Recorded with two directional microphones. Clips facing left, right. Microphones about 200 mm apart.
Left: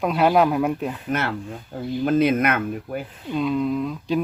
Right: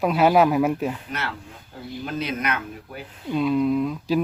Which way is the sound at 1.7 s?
50° left (ahead or behind).